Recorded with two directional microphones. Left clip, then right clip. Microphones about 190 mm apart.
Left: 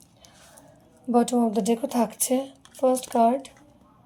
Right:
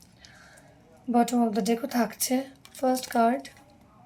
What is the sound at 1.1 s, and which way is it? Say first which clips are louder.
Speech: left 2 dB; 15° left (ahead or behind).